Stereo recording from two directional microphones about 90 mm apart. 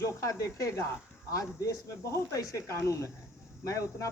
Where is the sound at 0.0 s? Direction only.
35° left (ahead or behind).